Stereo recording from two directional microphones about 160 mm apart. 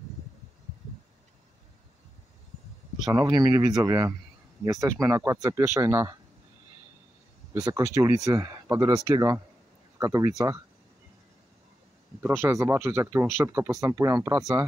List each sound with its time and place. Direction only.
3.0 s speech: 20° right (ahead or behind)
7.6 s speech: 20° right (ahead or behind)
12.2 s speech: 15° right (ahead or behind)